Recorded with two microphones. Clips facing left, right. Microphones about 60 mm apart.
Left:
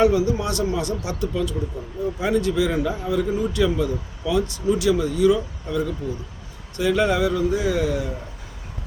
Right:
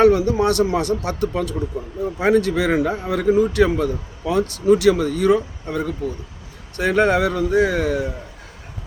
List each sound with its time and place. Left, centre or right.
0.0 s speech: right